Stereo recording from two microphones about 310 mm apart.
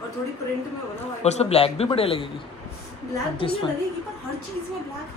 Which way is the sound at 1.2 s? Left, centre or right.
Centre.